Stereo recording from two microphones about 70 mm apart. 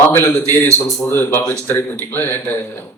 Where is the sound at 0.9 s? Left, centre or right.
Left.